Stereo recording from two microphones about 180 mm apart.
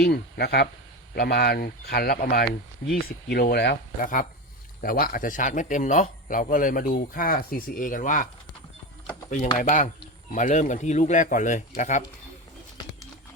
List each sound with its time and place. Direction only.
0.0 s speech: 65° left (ahead or behind)
4.0 s speech: 50° left (ahead or behind)
9.6 s speech: 45° left (ahead or behind)